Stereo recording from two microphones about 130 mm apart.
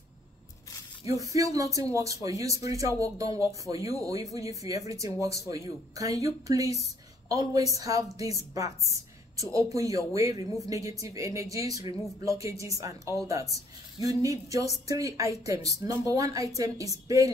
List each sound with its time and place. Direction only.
1.0 s speech: 25° right (ahead or behind)